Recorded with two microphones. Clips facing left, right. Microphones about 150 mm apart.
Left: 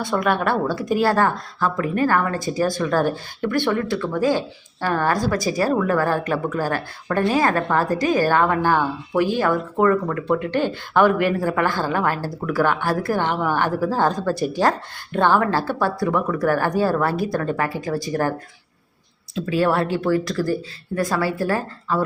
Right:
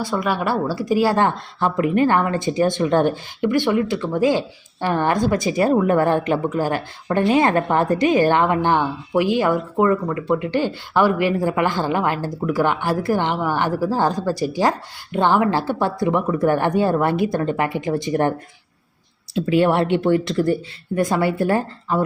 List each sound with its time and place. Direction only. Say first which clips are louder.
0.0 s speech: left 1 dB; 5° right (ahead or behind)
1.1 s speech: right 1 dB; 25° right (ahead or behind)